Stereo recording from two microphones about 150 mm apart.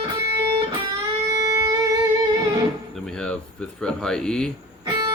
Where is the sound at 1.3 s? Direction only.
20° right (ahead or behind).